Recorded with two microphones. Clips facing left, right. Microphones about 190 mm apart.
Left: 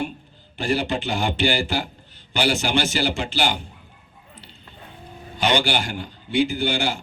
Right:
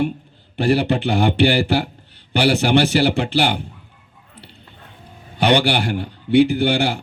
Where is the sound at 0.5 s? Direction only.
60° right (ahead or behind).